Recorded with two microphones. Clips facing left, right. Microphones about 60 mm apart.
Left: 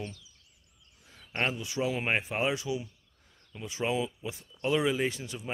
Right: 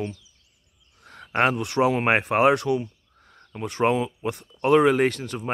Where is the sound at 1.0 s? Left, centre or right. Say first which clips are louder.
Right 12 dB; right.